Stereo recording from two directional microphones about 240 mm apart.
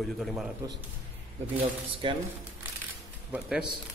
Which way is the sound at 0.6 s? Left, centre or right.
Centre.